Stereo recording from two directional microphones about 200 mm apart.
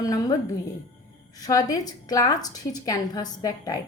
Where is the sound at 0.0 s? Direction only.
15° left (ahead or behind).